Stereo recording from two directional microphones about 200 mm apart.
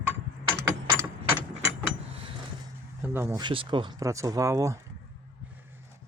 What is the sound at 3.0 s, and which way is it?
Speech, 10° right (ahead or behind).